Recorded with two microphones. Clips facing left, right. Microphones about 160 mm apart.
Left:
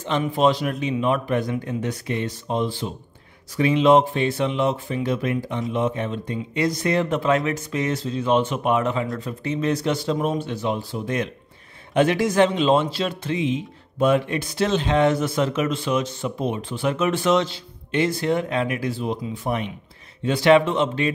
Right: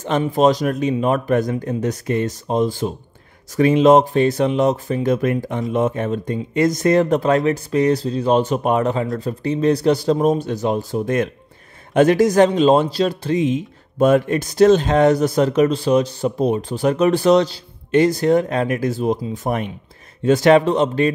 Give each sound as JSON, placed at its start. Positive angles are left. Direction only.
{"t": 0.2, "sound": "speech", "side_deg": -40}